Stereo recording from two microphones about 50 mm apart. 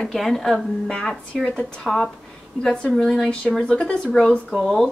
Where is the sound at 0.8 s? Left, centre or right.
Centre.